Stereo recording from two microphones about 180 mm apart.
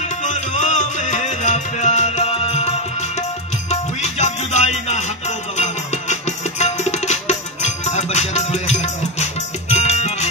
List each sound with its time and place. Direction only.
0.2 s music: 40° left (ahead or behind)
3.7 s music: 40° left (ahead or behind)
6.6 s music: 40° left (ahead or behind)